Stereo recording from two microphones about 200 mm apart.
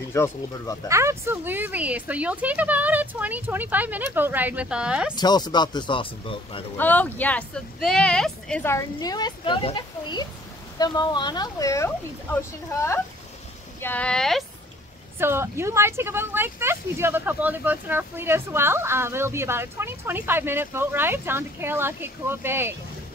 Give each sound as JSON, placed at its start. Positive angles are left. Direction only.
{"t": 0.1, "sound": "speech", "side_deg": 15}
{"t": 0.8, "sound": "speech", "side_deg": -15}
{"t": 5.1, "sound": "speech", "side_deg": 20}
{"t": 6.8, "sound": "speech", "side_deg": 10}
{"t": 13.7, "sound": "speech", "side_deg": 10}
{"t": 15.1, "sound": "speech", "side_deg": -10}